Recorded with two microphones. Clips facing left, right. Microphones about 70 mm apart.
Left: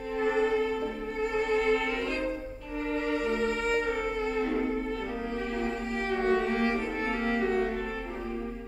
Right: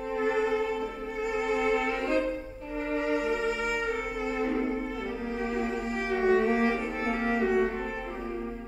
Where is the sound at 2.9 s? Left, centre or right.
Centre.